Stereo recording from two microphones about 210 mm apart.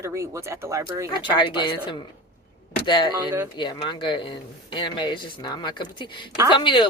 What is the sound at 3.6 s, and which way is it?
Speech, 20° left (ahead or behind).